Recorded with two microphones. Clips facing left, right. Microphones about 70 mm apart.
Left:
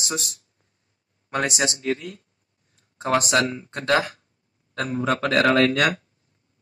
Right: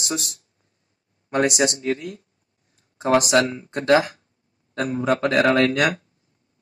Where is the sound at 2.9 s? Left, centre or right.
Centre.